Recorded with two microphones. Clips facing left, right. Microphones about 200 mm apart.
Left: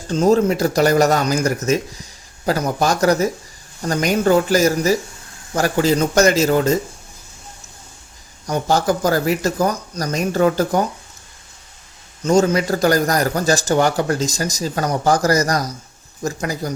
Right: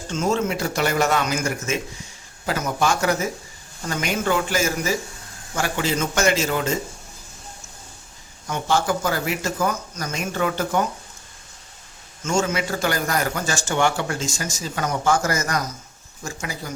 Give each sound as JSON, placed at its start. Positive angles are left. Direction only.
{"t": 0.1, "sound": "speech", "side_deg": 35}
{"t": 8.4, "sound": "speech", "side_deg": 40}
{"t": 12.2, "sound": "speech", "side_deg": 35}